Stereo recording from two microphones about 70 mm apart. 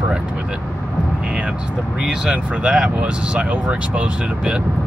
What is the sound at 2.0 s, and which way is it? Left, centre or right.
Speech, centre.